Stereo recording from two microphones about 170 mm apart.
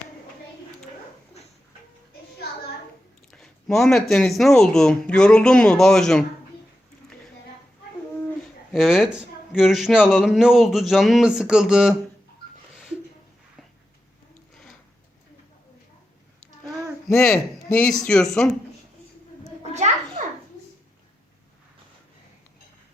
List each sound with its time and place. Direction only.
3.3 s a sound: centre (ahead or behind)
4.1 s a man's voice: centre (ahead or behind)
8.7 s a man's voice: centre (ahead or behind)
17.1 s speech: 15° left (ahead or behind)
17.3 s a man's voice: 5° left (ahead or behind)
19.7 s children playing: 40° right (ahead or behind)